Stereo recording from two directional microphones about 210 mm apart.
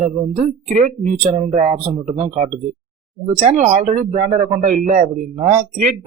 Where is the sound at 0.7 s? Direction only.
40° right (ahead or behind).